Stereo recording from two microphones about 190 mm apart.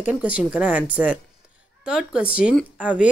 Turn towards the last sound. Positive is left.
turn(degrees=-5)  # may be behind; listen again after turning